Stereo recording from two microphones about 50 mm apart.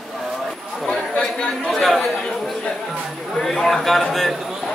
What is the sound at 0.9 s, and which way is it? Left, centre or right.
Chatter, left.